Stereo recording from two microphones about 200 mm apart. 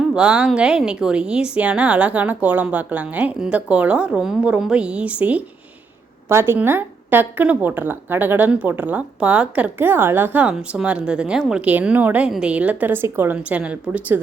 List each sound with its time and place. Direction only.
0.0 s a woman's voice: 5° right (ahead or behind)